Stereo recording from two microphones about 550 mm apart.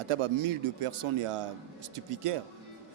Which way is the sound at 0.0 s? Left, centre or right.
Right.